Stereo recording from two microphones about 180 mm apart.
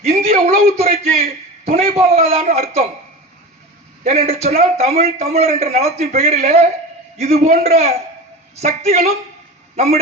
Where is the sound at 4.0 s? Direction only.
35° right (ahead or behind).